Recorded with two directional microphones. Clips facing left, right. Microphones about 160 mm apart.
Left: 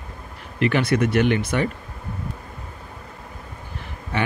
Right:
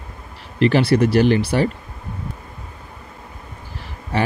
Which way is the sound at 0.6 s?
30° right (ahead or behind).